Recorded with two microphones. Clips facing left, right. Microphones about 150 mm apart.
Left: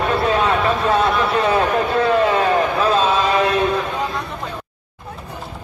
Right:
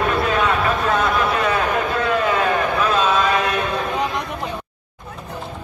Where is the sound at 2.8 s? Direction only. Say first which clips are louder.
Left 2 dB; 30° left (ahead or behind).